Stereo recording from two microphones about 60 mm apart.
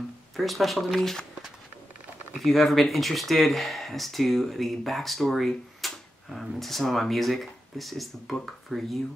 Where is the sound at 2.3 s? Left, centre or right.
Centre.